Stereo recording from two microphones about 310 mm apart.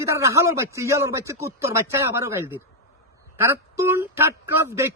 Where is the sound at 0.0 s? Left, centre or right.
Centre.